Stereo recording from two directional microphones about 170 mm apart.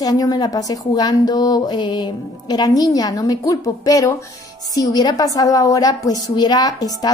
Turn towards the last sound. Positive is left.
turn(degrees=20)  # may be behind; listen again after turning